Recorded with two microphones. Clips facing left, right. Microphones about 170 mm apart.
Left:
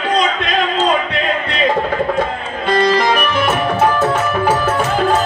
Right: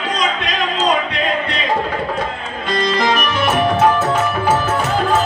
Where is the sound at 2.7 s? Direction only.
60° left (ahead or behind).